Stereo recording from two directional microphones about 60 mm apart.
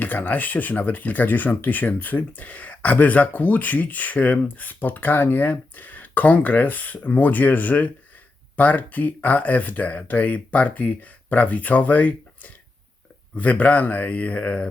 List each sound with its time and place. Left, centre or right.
0.0 s speech: left